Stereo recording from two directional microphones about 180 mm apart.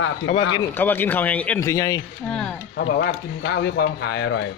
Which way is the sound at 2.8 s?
70° left (ahead or behind).